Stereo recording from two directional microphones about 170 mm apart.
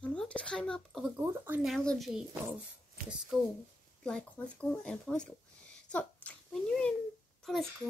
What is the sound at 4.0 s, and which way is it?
Speech, 5° left (ahead or behind).